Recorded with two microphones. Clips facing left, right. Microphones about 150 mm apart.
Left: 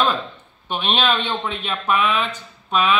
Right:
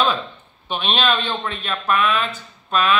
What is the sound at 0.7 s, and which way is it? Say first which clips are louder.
Speech: even; 10° left (ahead or behind).